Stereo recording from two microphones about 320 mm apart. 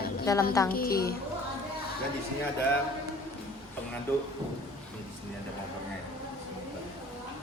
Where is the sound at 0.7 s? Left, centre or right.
Left.